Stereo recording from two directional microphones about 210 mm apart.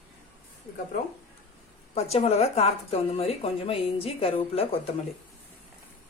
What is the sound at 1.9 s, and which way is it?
A woman's voice, 30° left (ahead or behind).